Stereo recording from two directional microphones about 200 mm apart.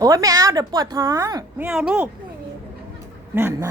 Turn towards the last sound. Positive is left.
turn(degrees=-10)  # may be behind; listen again after turning